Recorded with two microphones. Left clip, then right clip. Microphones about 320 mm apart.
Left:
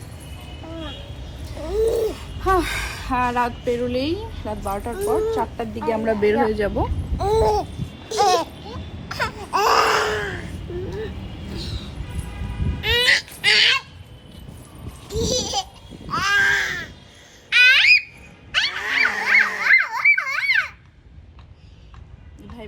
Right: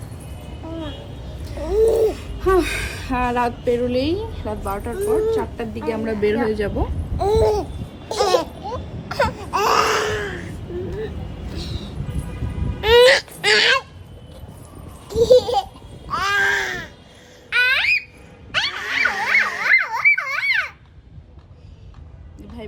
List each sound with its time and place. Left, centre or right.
1.6 s a sound: centre
2.0 s speech: centre
9.2 s baby cry: centre
12.8 s whimper: right
15.0 s a sound: right
16.1 s baby cry: centre
17.5 s squawk: right
18.5 s dog: right
19.2 s a sound: centre